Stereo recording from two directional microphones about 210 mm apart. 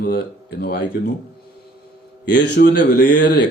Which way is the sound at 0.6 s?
50° left (ahead or behind).